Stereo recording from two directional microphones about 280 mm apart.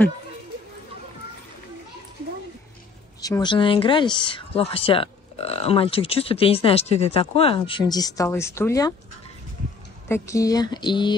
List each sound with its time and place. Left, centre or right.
3.2 s speech: centre
10.0 s speech: centre